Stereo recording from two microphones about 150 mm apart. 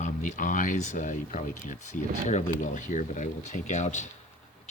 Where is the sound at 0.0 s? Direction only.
55° left (ahead or behind).